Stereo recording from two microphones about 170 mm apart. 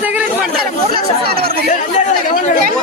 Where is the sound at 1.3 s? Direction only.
65° right (ahead or behind).